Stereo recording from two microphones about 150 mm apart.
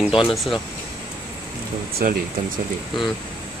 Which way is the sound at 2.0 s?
75° right (ahead or behind).